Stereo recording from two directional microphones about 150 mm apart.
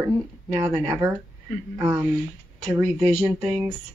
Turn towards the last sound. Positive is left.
turn(degrees=-15)  # may be behind; listen again after turning